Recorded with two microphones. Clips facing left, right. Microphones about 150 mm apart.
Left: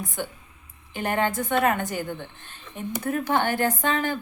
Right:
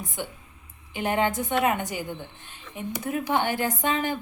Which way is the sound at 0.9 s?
15° right (ahead or behind).